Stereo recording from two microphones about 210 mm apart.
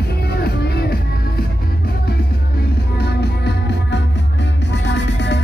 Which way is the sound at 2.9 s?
50° left (ahead or behind).